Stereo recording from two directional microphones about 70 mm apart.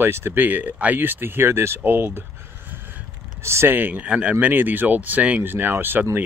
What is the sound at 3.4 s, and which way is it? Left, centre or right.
Speech, right.